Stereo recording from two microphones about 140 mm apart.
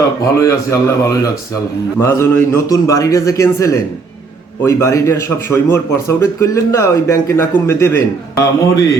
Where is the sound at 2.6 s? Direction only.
25° left (ahead or behind).